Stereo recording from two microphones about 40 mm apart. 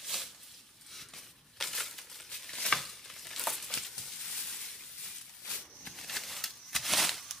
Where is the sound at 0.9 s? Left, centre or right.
Centre.